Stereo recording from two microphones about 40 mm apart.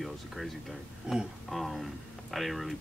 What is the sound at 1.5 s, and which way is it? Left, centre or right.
Speech, centre.